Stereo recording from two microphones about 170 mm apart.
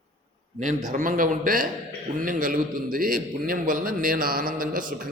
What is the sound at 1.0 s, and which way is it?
A man's voice, 55° right (ahead or behind).